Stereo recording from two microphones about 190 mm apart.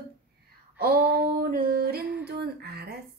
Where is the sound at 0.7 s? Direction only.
55° right (ahead or behind).